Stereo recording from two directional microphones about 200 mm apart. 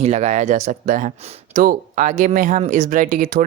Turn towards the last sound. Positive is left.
turn(degrees=-40)  # may be behind; listen again after turning